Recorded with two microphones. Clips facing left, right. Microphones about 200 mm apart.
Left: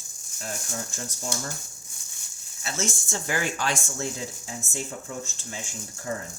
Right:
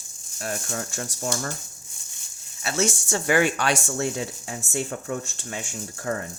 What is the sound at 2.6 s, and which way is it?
Speech, 70° right (ahead or behind).